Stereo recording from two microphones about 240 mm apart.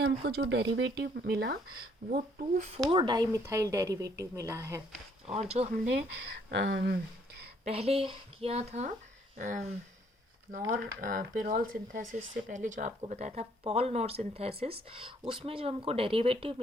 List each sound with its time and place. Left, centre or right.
0.3 s speech: right
2.8 s speech: centre
5.3 s speech: right
6.5 s speech: right
7.6 s speech: right
10.7 s speech: right